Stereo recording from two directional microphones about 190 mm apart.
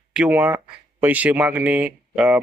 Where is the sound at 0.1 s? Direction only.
5° right (ahead or behind).